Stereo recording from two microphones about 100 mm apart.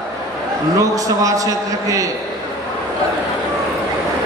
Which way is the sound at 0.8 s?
35° right (ahead or behind).